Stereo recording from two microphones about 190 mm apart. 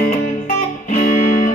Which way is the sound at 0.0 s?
45° left (ahead or behind).